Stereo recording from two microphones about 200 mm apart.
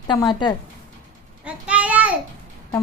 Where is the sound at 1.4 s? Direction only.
5° right (ahead or behind).